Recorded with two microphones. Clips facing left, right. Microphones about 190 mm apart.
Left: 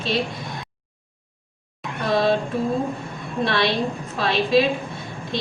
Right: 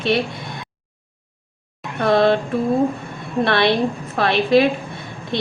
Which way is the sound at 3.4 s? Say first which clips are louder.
Right 4 dB; 60° right (ahead or behind).